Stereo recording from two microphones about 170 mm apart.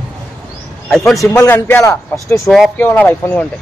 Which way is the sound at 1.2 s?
15° left (ahead or behind).